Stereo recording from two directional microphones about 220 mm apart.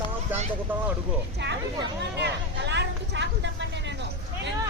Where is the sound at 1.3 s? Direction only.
50° right (ahead or behind).